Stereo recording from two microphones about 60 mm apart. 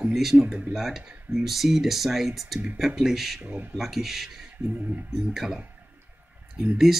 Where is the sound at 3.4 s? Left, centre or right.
Right.